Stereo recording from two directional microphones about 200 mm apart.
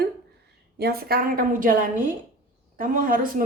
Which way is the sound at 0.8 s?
50° right (ahead or behind).